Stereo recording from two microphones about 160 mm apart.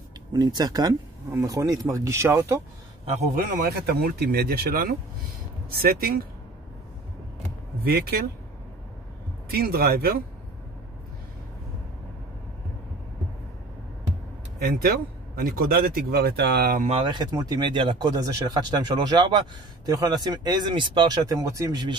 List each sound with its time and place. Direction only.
0.3 s speech: 25° right (ahead or behind)
3.5 s speech: 80° right
7.8 s speech: 75° right (ahead or behind)
9.5 s speech: 75° right (ahead or behind)
14.6 s speech: 70° right (ahead or behind)
16.8 s speech: 35° right (ahead or behind)